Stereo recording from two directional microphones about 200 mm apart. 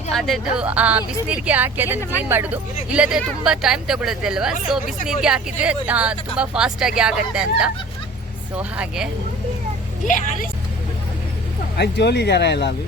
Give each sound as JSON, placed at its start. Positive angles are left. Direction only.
{"t": 0.1, "sound": "speech", "side_deg": 0}
{"t": 11.8, "sound": "speech", "side_deg": 55}